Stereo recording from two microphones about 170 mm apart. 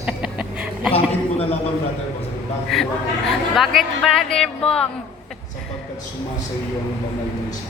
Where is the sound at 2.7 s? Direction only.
Centre (ahead or behind).